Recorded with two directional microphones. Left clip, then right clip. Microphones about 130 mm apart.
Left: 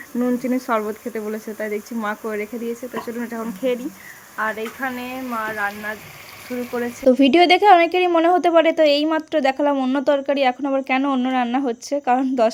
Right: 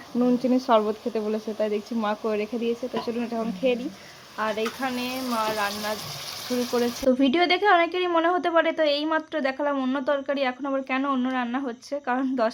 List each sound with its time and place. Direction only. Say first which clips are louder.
0.2 s speech: left 1 dB; 5° left (ahead or behind)
4.4 s speech: left 3 dB; 10° right (ahead or behind)
6.5 s speech: even; 5° right (ahead or behind)
7.1 s a woman's voice: left 9 dB; 45° left (ahead or behind)
9.7 s speech: left 6 dB; 30° left (ahead or behind)
10.0 s a woman's voice: left 8 dB; 45° left (ahead or behind)